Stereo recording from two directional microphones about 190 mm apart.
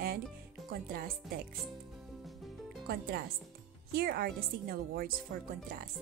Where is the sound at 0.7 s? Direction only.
50° right (ahead or behind).